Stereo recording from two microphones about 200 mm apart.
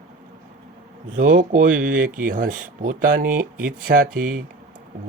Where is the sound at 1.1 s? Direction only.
40° right (ahead or behind).